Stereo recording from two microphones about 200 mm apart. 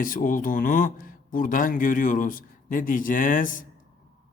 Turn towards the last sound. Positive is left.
turn(degrees=40)  # may be behind; listen again after turning